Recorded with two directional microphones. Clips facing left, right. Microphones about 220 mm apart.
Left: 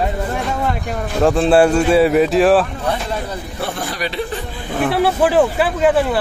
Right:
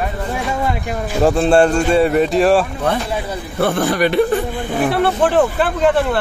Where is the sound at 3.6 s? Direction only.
55° right (ahead or behind).